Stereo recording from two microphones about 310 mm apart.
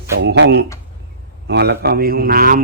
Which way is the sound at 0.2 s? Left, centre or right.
Right.